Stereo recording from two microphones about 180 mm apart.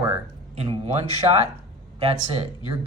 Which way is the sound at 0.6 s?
30° right (ahead or behind).